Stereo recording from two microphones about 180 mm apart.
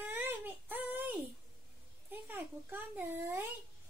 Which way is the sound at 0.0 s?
10° right (ahead or behind).